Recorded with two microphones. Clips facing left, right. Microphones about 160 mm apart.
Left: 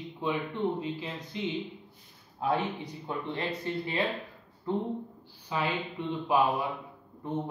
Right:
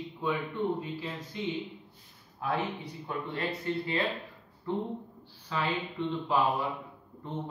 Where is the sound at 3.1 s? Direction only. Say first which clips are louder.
Left 1 dB; 20° left (ahead or behind).